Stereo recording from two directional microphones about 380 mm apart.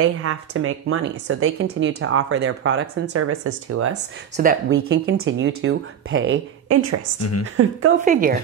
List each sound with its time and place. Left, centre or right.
0.0 s speech: right
7.2 s speech: left
8.0 s speech: right